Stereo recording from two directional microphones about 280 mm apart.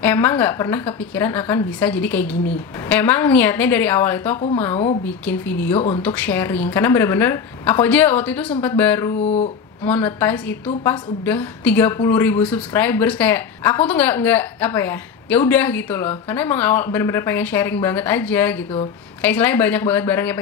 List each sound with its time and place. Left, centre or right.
0.0 s a woman's voice: centre
5.8 s speech: left
6.0 s a woman's voice: centre
9.2 s speech: left
9.8 s a woman's voice: centre